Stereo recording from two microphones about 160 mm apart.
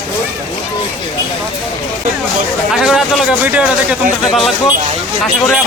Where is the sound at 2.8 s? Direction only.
5° right (ahead or behind).